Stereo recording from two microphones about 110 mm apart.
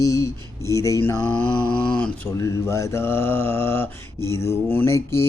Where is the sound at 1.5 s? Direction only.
10° left (ahead or behind).